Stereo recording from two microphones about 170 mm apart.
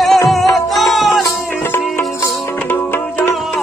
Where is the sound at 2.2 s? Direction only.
10° left (ahead or behind).